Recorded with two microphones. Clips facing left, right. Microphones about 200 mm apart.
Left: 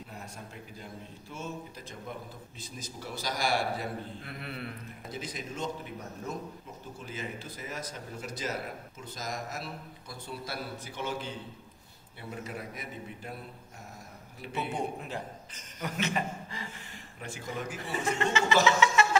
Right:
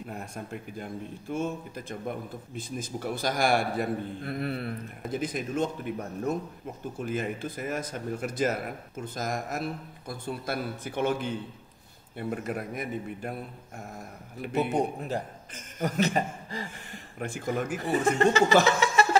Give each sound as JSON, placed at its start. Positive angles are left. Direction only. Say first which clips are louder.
{"t": 0.1, "sound": "a man's voice", "louder": "right 7 dB", "side_deg": -55}
{"t": 7.0, "sound": "a man's voice", "louder": "right 9 dB", "side_deg": -55}
{"t": 14.4, "sound": "a man's voice", "louder": "right 7 dB", "side_deg": -55}
{"t": 17.2, "sound": "a man's voice", "louder": "right 7 dB", "side_deg": -50}
{"t": 18.8, "sound": "a sound", "louder": "even", "side_deg": -35}